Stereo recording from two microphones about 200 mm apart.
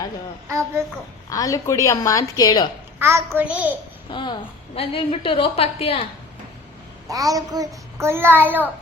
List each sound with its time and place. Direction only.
1.3 s a woman's voice: 15° left (ahead or behind)
3.0 s a child's voice: 15° right (ahead or behind)
4.1 s a woman's voice: 25° left (ahead or behind)
7.1 s a child's voice: 15° right (ahead or behind)